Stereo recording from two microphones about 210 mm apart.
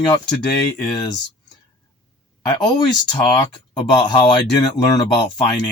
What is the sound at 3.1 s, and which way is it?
Speech, 20° left (ahead or behind).